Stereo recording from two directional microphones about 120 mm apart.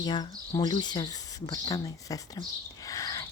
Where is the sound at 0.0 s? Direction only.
35° left (ahead or behind).